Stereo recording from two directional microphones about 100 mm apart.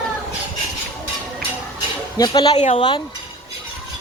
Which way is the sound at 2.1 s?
45° left (ahead or behind).